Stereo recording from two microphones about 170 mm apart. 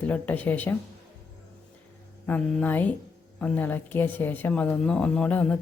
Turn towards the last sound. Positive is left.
turn(degrees=10)  # may be behind; listen again after turning